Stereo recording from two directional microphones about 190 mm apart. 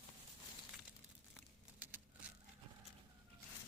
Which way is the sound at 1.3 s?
10° right (ahead or behind).